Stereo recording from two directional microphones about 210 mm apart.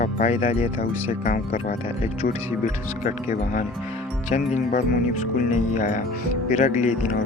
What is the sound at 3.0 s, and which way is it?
Speech, 35° left (ahead or behind).